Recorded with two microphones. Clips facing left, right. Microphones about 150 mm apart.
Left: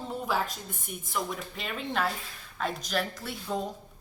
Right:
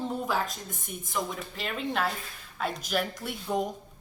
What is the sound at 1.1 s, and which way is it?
A woman's voice, centre (ahead or behind).